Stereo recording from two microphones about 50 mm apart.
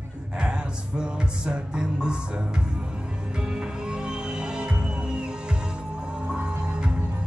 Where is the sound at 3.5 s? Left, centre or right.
Centre.